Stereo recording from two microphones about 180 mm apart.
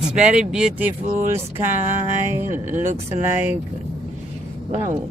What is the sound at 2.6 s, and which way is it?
Speech, 45° right (ahead or behind).